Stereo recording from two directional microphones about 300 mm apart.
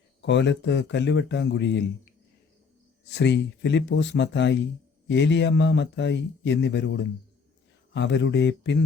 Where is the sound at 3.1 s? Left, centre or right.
Left.